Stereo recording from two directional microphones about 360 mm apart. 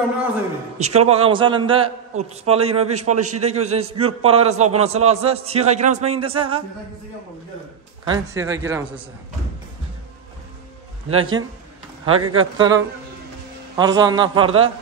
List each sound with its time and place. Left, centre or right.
0.7 s a man's voice: centre
8.0 s a man's voice: centre
11.1 s speech: right
12.5 s a man's voice: centre